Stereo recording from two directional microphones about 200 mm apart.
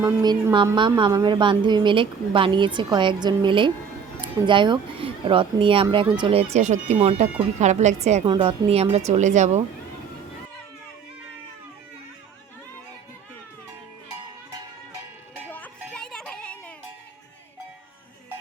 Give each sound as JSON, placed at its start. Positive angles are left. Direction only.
{"t": 0.2, "sound": "a woman's voice", "side_deg": -20}
{"t": 15.4, "sound": "music", "side_deg": 10}